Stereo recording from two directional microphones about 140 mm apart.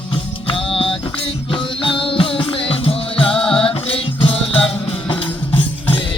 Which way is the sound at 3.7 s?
40° left (ahead or behind).